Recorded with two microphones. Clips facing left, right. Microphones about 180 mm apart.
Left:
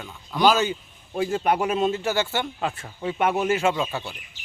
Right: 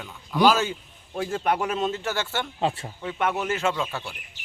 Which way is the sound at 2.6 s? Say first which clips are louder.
Right 3 dB; 25° right (ahead or behind).